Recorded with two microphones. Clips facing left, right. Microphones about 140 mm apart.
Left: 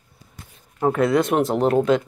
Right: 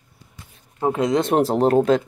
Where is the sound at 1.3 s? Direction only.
35° right (ahead or behind).